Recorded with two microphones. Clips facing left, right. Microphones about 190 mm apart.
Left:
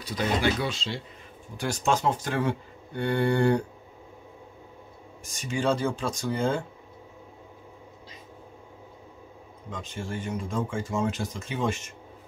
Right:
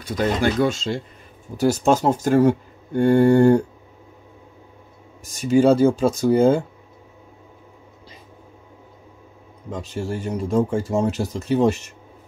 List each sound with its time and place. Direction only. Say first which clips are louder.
0.0 s speech: right 5 dB; 45° right (ahead or behind)
5.2 s speech: right 12 dB; 40° right (ahead or behind)
9.7 s speech: right 8 dB; 40° right (ahead or behind)